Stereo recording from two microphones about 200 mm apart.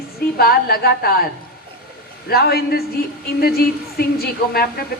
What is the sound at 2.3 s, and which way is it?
A woman's voice, 50° left (ahead or behind).